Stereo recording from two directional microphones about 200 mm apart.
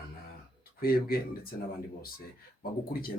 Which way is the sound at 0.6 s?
50° left (ahead or behind).